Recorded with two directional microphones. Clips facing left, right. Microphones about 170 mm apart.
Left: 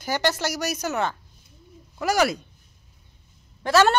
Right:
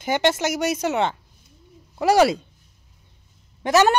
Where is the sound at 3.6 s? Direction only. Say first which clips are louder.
Right 2 dB; 15° right (ahead or behind).